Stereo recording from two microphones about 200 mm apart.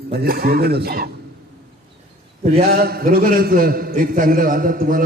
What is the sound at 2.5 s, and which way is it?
A man's voice, 50° right (ahead or behind).